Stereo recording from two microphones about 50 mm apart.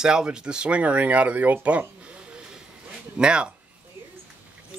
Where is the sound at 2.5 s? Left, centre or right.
Centre.